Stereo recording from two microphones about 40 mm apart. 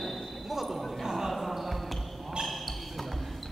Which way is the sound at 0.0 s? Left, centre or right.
Centre.